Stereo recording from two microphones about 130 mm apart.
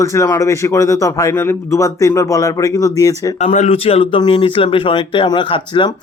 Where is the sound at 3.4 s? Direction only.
60° left (ahead or behind).